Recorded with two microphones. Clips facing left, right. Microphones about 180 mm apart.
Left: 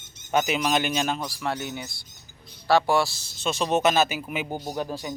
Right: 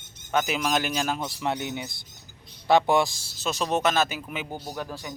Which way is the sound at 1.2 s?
20° right (ahead or behind).